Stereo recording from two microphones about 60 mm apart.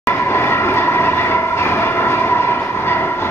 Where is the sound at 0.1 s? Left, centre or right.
Left.